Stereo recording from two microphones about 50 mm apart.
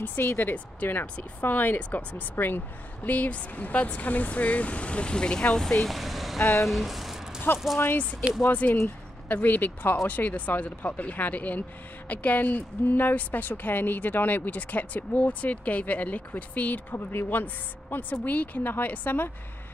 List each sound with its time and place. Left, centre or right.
0.1 s speech: left; by 5.9 s centre
5.9 s vehicle: centre
6.6 s a sound: centre
7.5 s speech: centre
8.5 s speech: left
16.9 s speech: left